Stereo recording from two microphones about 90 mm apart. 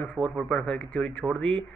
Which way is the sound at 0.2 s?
5° left (ahead or behind).